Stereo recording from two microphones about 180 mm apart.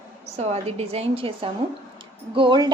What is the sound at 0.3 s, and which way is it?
A woman's voice, 35° right (ahead or behind).